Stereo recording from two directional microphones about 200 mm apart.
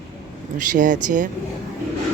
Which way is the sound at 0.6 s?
40° right (ahead or behind).